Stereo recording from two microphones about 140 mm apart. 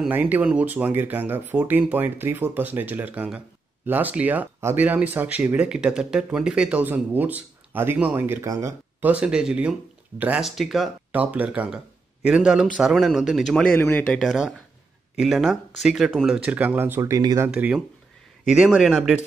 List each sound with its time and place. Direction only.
0.1 s speech: 10° right (ahead or behind)
9.0 s speech: 5° right (ahead or behind)
11.1 s speech: 10° right (ahead or behind)
13.7 s speech: 15° left (ahead or behind)
14.1 s speech: centre (ahead or behind); by 17.5 s 25° right (ahead or behind)
17.5 s speech: 10° right (ahead or behind)